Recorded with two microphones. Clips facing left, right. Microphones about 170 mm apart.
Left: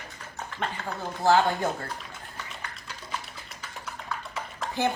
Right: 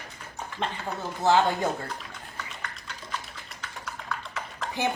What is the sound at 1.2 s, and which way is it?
Speech, 20° right (ahead or behind).